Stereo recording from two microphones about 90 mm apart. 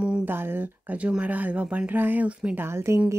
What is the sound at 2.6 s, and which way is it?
Speech, 30° right (ahead or behind).